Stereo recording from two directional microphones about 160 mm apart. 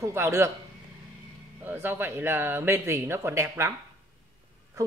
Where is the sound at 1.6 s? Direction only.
10° right (ahead or behind).